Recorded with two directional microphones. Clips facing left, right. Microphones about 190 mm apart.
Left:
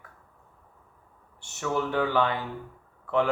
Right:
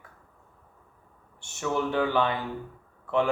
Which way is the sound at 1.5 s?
20° right (ahead or behind).